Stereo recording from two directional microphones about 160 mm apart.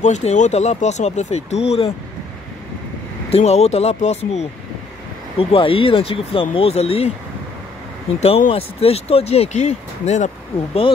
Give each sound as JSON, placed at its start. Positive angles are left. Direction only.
{"t": 0.0, "sound": "speech", "side_deg": 45}
{"t": 3.3, "sound": "speech", "side_deg": 40}
{"t": 8.2, "sound": "speech", "side_deg": 35}